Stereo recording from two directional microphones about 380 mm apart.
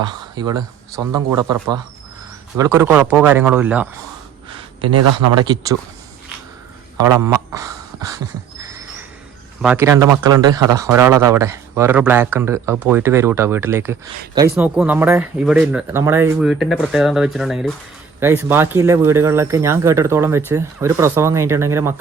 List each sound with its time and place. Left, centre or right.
0.0 s speech: centre
4.5 s a sound: centre
4.9 s speech: right
6.9 s a man's voice: centre
9.6 s speech: centre